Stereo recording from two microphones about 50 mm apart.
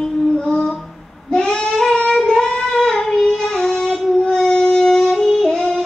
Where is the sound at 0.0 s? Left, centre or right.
Centre.